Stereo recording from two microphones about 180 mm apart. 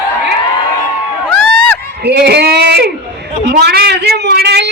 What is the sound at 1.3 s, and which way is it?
Crowd, 5° left (ahead or behind).